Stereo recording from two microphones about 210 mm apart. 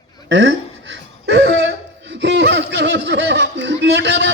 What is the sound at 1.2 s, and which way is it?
Cough, 55° right (ahead or behind).